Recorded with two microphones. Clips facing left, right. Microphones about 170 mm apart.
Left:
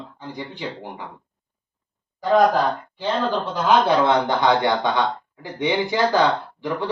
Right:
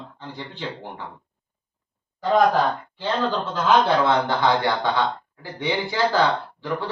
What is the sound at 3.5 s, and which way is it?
Speech, 20° left (ahead or behind).